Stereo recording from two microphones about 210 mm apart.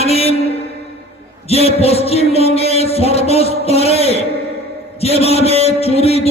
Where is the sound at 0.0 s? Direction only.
30° left (ahead or behind).